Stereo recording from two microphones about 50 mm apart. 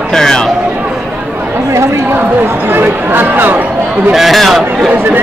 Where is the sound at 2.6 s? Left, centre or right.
Right.